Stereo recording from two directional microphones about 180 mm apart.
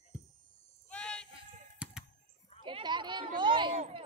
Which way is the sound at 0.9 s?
5° left (ahead or behind).